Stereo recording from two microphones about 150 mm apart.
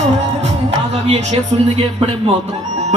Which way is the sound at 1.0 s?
45° right (ahead or behind).